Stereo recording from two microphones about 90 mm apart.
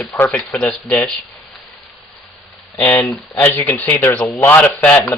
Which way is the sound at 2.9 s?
25° left (ahead or behind).